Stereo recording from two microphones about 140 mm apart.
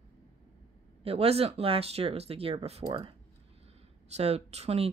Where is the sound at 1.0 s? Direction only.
45° right (ahead or behind).